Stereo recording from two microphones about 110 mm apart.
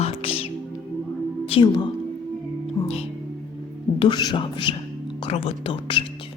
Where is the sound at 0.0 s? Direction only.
60° left (ahead or behind).